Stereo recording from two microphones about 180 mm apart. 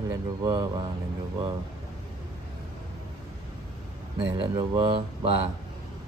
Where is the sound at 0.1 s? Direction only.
20° right (ahead or behind).